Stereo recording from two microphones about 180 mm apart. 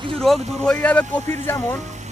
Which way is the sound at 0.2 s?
5° left (ahead or behind).